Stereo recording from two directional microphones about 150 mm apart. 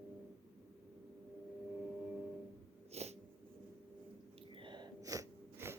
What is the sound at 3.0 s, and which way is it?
Sneeze, 45° right (ahead or behind).